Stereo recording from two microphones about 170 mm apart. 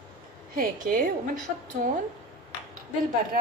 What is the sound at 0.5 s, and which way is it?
Speech, 55° right (ahead or behind).